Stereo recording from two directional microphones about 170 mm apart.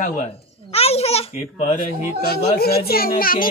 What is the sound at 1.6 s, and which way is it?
Speech, 55° left (ahead or behind).